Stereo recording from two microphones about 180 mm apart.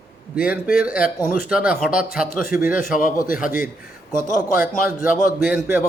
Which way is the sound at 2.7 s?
50° left (ahead or behind).